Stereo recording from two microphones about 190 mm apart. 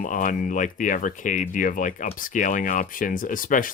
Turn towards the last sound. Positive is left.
turn(degrees=45)  # may be behind; listen again after turning